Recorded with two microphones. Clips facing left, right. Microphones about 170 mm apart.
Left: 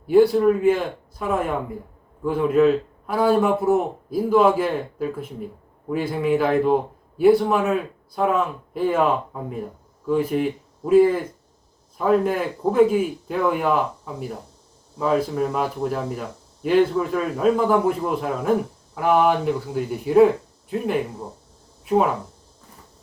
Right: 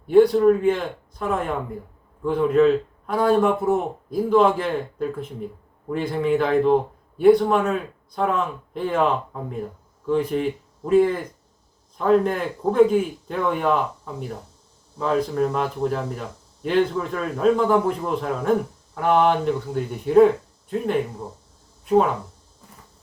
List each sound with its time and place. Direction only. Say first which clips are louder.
0.1 s a man's voice: right 1 dB; 5° left (ahead or behind)